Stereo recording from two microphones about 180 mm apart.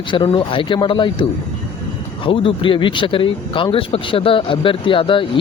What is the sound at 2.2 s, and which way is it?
Speech, 30° left (ahead or behind).